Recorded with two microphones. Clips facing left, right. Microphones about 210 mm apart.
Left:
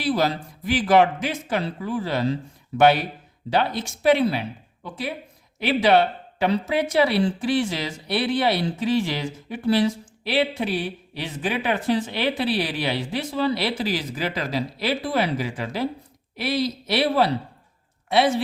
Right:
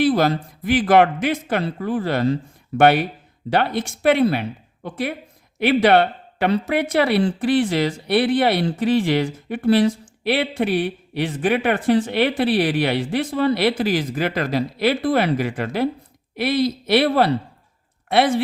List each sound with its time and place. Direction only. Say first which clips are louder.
0.0 s a woman's voice: right 5 dB; 55° right (ahead or behind)